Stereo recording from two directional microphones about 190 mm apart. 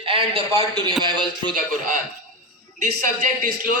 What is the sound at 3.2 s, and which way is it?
Speech, 45° right (ahead or behind).